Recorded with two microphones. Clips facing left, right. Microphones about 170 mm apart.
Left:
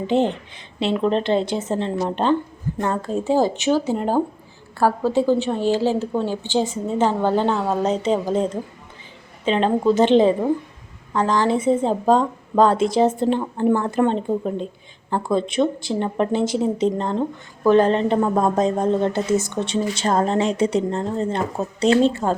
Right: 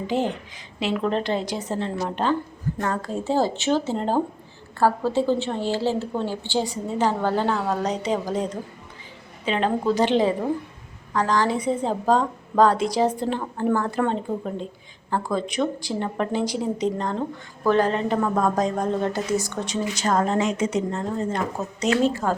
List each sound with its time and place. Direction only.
0.1 s a woman's voice: 25° left (ahead or behind)